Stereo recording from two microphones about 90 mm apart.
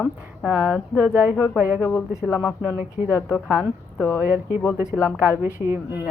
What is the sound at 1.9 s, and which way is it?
Speech, 15° left (ahead or behind).